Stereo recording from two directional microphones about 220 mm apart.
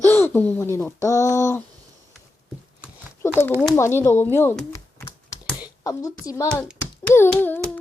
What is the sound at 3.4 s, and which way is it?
Speech, 10° left (ahead or behind).